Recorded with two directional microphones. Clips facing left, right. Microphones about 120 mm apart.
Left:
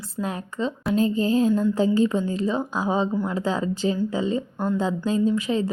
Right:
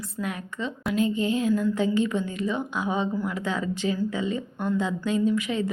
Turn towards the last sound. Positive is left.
turn(degrees=30)  # may be behind; listen again after turning